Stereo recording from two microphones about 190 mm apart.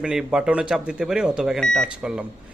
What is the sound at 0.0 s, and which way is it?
A man's voice, 5° right (ahead or behind).